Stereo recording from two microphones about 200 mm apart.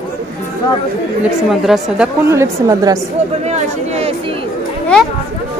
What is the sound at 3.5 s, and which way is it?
Speech, 30° right (ahead or behind).